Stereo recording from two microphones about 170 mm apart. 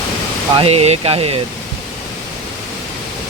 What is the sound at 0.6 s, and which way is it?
Speech, 35° right (ahead or behind).